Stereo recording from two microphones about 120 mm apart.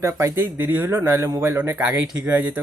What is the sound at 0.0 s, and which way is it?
Speech, 25° right (ahead or behind).